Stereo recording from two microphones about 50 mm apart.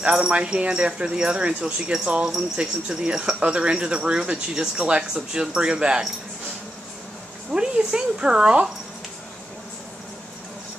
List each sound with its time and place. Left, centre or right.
0.0 s speech: right
7.5 s speech: centre